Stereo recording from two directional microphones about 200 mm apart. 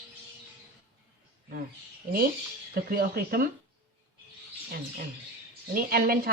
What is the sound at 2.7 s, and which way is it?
Speech, 50° right (ahead or behind).